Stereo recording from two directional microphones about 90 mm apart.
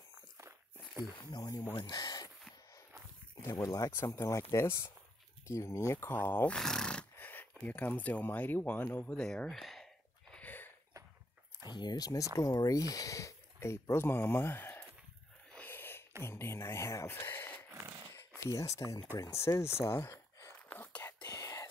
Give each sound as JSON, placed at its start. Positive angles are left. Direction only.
{"t": 1.3, "sound": "speech", "side_deg": 45}
{"t": 3.4, "sound": "speech", "side_deg": 40}
{"t": 6.1, "sound": "speech", "side_deg": 20}
{"t": 6.5, "sound": "neigh", "side_deg": 5}
{"t": 7.2, "sound": "speech", "side_deg": 20}
{"t": 10.3, "sound": "a sound", "side_deg": 20}
{"t": 11.7, "sound": "speech", "side_deg": 55}
{"t": 15.5, "sound": "a sound", "side_deg": 20}
{"t": 16.3, "sound": "speech", "side_deg": 30}
{"t": 18.4, "sound": "speech", "side_deg": 40}
{"t": 20.7, "sound": "whispering", "side_deg": 25}
{"t": 21.2, "sound": "whispering", "side_deg": 40}